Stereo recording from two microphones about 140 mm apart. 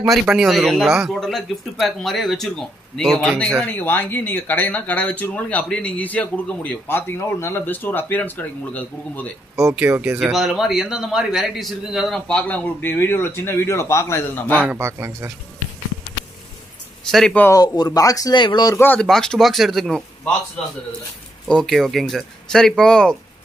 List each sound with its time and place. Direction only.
0.3 s speech: centre (ahead or behind)
9.8 s speech: 15° right (ahead or behind)
10.2 s a man's voice: centre (ahead or behind); by 14.6 s 15° left (ahead or behind)
14.6 s a man's voice: 15° right (ahead or behind)
17.1 s a man's voice: centre (ahead or behind)
17.6 s speech: 25° left (ahead or behind)
18.8 s a man's voice: 15° left (ahead or behind)
21.5 s a man's voice: 5° left (ahead or behind)